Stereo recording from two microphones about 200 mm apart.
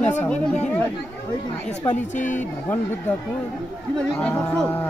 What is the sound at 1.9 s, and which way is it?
Speech, 35° left (ahead or behind).